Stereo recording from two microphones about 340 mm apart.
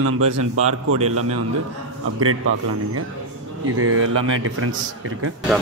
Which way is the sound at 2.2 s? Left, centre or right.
Right.